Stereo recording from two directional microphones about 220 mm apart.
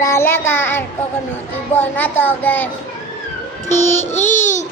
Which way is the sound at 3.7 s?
30° left (ahead or behind).